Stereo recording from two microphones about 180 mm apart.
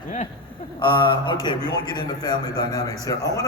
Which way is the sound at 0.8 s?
25° left (ahead or behind).